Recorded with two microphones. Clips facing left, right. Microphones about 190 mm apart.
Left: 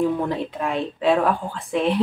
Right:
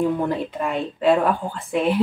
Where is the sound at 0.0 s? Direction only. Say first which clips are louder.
Even; centre (ahead or behind).